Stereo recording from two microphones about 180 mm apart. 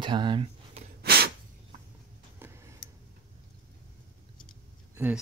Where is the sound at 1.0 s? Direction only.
60° right (ahead or behind).